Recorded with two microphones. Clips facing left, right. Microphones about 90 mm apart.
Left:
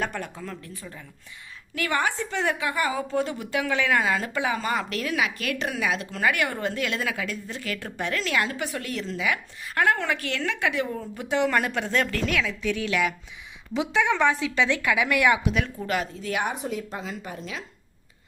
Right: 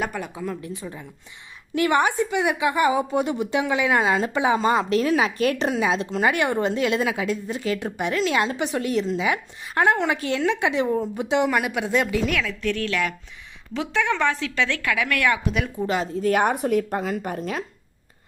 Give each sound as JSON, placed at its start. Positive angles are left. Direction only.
{"t": 0.0, "sound": "a woman's voice", "side_deg": -5}
{"t": 12.2, "sound": "a woman's voice", "side_deg": 0}
{"t": 15.8, "sound": "a woman's voice", "side_deg": -25}
{"t": 16.2, "sound": "a woman's voice", "side_deg": -50}